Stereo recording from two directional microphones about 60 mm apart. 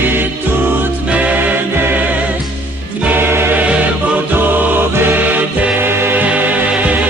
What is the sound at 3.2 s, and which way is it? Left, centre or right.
Music, right.